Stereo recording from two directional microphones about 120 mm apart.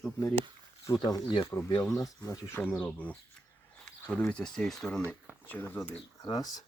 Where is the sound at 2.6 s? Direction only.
15° left (ahead or behind).